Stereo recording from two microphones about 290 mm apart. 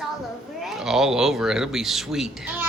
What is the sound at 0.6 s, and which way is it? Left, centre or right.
A man's voice, centre.